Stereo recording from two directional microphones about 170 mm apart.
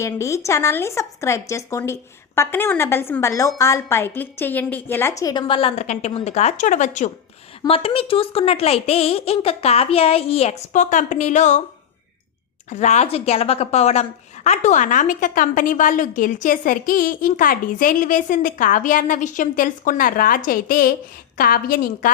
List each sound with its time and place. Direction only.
0.0 s a woman's voice: 15° left (ahead or behind); by 7.1 s 45° left (ahead or behind)
7.6 s speech: 30° left (ahead or behind)
12.7 s a woman's voice: 45° left (ahead or behind)